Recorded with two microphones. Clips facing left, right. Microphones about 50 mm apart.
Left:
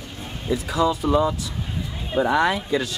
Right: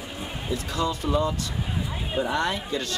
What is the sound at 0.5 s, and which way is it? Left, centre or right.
Speech, centre.